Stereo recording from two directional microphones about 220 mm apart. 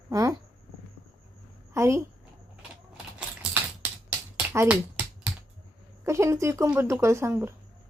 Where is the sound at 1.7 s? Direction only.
15° right (ahead or behind).